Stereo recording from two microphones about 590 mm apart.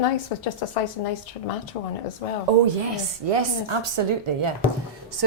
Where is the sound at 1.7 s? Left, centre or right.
Left.